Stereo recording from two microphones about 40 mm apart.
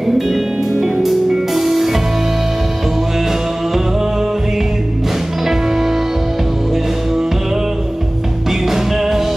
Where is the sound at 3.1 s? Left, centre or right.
Centre.